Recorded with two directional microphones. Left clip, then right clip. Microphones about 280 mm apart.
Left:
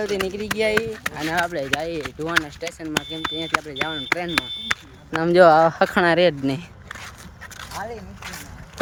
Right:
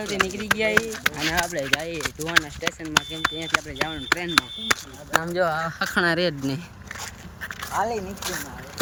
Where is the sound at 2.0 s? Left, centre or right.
Centre.